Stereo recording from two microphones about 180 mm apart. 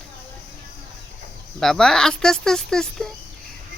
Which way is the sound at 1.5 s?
Centre (ahead or behind).